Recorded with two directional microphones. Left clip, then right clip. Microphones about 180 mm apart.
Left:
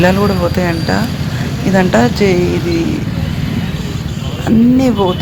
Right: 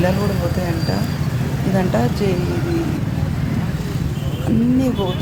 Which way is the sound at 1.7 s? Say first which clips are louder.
Left 9 dB; 15° left (ahead or behind).